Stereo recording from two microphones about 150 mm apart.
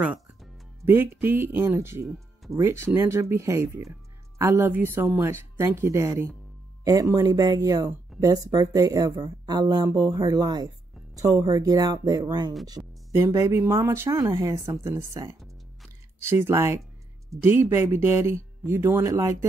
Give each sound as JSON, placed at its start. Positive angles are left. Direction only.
{"t": 0.8, "sound": "speech", "side_deg": -15}
{"t": 2.0, "sound": "music", "side_deg": 0}
{"t": 2.5, "sound": "speech", "side_deg": -20}